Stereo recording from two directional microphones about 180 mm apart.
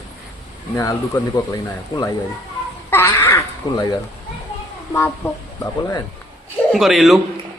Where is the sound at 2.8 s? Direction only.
15° left (ahead or behind).